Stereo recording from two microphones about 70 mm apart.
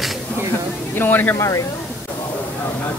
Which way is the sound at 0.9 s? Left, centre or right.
Left.